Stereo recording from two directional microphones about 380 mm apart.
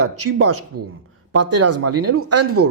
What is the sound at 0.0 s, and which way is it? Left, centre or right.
A man's voice, right.